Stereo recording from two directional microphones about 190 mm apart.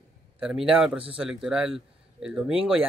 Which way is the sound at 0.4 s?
5° right (ahead or behind).